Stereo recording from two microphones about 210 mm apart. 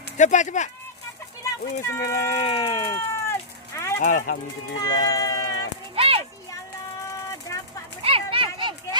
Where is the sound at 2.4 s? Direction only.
25° left (ahead or behind).